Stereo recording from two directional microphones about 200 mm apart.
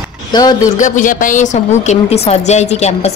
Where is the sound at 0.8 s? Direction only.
40° left (ahead or behind).